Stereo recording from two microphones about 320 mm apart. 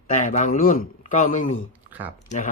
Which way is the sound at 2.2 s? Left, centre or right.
Left.